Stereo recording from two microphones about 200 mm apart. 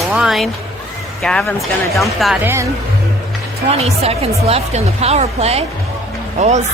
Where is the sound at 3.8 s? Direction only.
30° right (ahead or behind).